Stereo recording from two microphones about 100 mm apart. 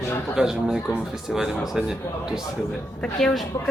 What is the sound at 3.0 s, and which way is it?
Speech, 5° left (ahead or behind).